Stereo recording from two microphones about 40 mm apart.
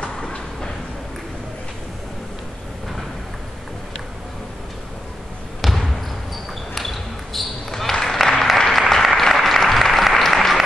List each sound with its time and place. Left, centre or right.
0.2 s a sound: centre
5.6 s trickle: centre
6.7 s basketball bounce: centre
8.5 s applause: centre